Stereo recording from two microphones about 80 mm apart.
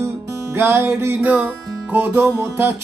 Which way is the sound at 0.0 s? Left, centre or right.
Right.